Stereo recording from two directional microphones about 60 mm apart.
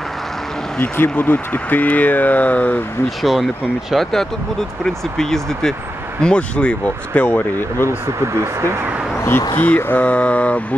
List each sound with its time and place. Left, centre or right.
0.9 s speech: left
3.2 s speech: centre
6.2 s speech: centre
8.4 s speech: right
9.6 s speech: left
10.0 s speech: left